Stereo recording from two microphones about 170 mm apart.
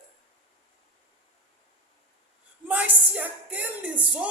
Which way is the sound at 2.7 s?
10° right (ahead or behind).